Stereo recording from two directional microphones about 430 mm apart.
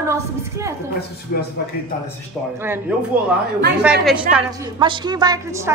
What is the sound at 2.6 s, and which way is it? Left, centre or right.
A woman's voice, centre.